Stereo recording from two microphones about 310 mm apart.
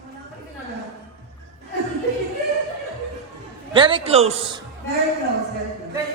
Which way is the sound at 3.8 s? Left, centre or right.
Centre.